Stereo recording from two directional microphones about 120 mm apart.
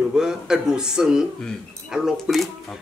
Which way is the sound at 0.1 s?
5° right (ahead or behind).